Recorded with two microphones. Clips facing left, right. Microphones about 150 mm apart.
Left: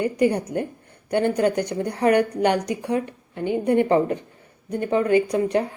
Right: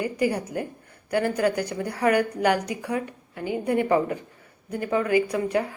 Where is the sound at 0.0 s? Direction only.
25° left (ahead or behind).